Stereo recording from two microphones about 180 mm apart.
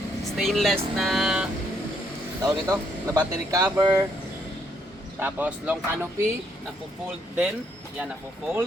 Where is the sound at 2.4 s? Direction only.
20° right (ahead or behind).